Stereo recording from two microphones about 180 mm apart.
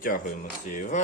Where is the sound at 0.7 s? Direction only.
45° left (ahead or behind).